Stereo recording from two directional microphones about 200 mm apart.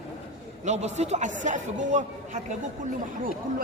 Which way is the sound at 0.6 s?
35° right (ahead or behind).